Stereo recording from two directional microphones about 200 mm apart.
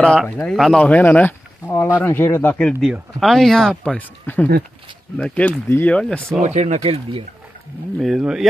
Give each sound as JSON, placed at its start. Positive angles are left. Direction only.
{"t": 0.0, "sound": "speech", "side_deg": 5}
{"t": 6.4, "sound": "speech", "side_deg": -35}
{"t": 8.0, "sound": "speech", "side_deg": 0}